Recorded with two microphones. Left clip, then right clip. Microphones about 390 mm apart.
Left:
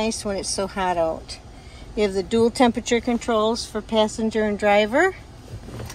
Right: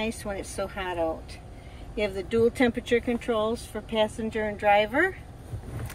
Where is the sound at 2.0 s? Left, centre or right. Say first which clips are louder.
Left 3 dB; centre.